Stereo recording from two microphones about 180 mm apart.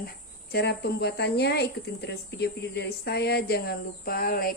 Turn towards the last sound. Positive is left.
turn(degrees=55)  # may be behind; listen again after turning